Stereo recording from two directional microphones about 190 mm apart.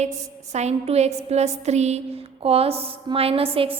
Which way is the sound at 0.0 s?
35° right (ahead or behind).